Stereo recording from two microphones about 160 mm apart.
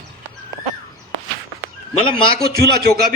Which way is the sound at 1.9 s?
35° left (ahead or behind).